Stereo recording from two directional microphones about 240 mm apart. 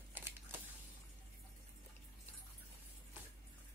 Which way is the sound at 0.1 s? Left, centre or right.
Centre.